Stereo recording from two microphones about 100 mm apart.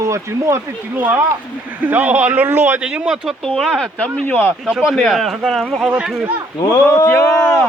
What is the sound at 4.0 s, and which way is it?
Speech, 10° left (ahead or behind).